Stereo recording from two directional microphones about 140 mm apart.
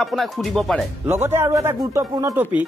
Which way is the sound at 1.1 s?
15° right (ahead or behind).